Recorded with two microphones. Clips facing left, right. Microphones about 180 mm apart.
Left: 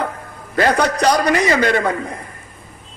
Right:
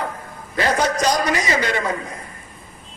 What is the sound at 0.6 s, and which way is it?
A man's voice, 65° left (ahead or behind).